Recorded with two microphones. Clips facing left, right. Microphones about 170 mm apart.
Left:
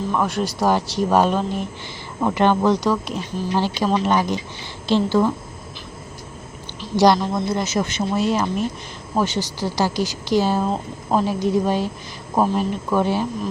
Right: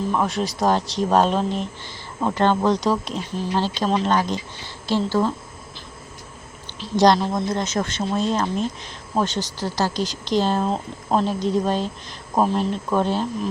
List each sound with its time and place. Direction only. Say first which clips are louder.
0.1 s speech: left 1 dB; centre (ahead or behind); by 5.3 s 15° left (ahead or behind)
6.9 s speech: left 1 dB; 5° left (ahead or behind)